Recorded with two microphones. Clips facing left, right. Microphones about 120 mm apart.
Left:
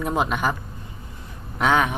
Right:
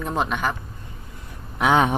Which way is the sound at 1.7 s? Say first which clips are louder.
Right 2 dB; 25° right (ahead or behind).